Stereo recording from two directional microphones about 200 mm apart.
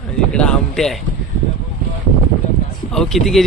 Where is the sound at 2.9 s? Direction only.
Centre (ahead or behind).